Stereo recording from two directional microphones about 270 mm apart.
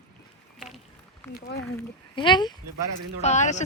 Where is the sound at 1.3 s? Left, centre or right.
Left.